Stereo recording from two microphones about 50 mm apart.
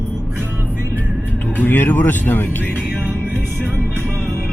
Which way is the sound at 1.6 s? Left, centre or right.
Left.